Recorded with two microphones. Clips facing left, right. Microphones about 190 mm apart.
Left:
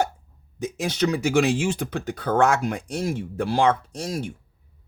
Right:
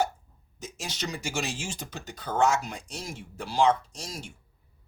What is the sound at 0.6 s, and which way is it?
Speech, 60° left (ahead or behind).